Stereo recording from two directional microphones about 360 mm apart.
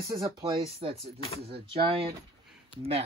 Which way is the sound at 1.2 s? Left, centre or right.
Centre.